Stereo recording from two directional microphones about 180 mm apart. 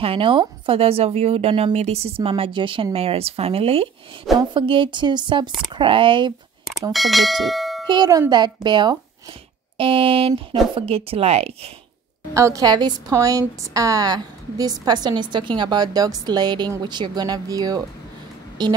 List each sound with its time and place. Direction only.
0.0 s a woman's voice: 30° right (ahead or behind)
6.9 s bell: centre (ahead or behind)
7.9 s a woman's voice: 20° right (ahead or behind)
12.4 s a woman's voice: 20° right (ahead or behind)